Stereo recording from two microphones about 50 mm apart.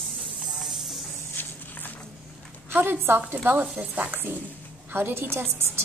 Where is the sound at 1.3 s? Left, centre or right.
Left.